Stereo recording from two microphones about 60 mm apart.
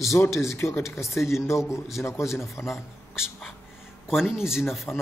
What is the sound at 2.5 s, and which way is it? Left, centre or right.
Speech, left.